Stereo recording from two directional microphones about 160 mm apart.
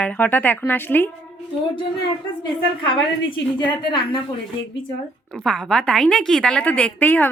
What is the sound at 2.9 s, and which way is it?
A woman's voice, 30° left (ahead or behind).